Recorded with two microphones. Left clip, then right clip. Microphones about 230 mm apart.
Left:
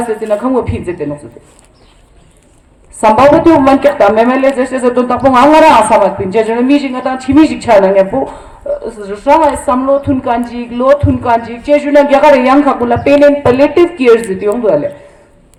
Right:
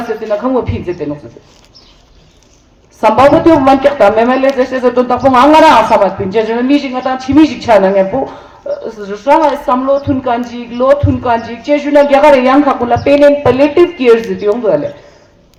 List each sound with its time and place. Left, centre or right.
0.3 s speech: left
3.0 s speech: left